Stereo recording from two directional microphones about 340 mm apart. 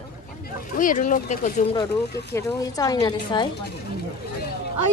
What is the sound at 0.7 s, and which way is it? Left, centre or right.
Speech, left.